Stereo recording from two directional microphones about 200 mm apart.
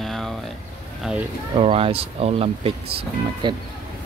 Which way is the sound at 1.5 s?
30° right (ahead or behind).